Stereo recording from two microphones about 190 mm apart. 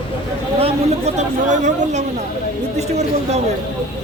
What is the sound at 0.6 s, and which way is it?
Speech, 35° right (ahead or behind).